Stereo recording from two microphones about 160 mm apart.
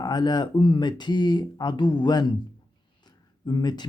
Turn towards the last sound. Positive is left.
turn(degrees=25)  # may be behind; listen again after turning